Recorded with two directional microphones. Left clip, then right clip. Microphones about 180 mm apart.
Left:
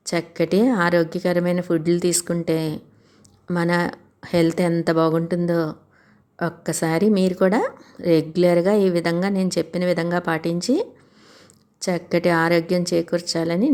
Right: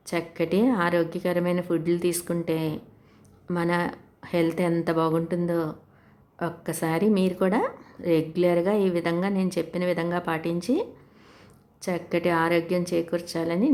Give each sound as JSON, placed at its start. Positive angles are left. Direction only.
{"t": 0.0, "sound": "a woman's voice", "side_deg": 25}